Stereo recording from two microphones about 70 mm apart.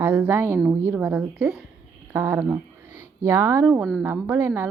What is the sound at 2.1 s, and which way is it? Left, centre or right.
Speech, right.